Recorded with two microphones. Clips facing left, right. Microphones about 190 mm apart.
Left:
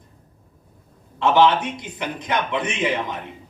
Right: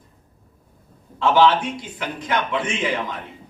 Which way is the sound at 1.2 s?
20° left (ahead or behind).